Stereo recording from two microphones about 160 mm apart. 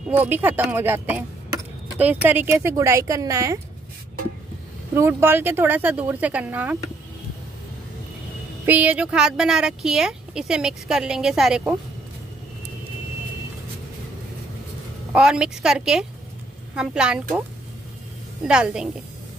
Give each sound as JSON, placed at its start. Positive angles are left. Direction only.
{"t": 0.1, "sound": "speech", "side_deg": -10}
{"t": 4.9, "sound": "speech", "side_deg": -15}
{"t": 8.6, "sound": "speech", "side_deg": -10}
{"t": 15.1, "sound": "speech", "side_deg": -5}
{"t": 18.4, "sound": "speech", "side_deg": -5}